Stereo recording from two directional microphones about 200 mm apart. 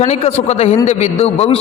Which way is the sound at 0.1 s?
30° left (ahead or behind).